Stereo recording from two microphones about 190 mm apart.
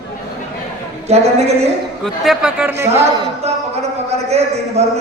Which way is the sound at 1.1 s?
35° right (ahead or behind).